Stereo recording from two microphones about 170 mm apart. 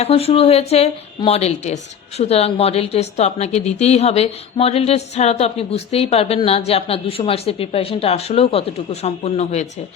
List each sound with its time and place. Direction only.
0.0 s a woman's voice: 35° left (ahead or behind)